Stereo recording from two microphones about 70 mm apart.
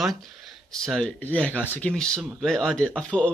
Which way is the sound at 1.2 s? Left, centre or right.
Left.